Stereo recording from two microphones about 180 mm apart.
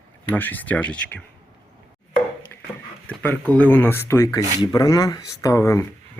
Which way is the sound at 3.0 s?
10° left (ahead or behind).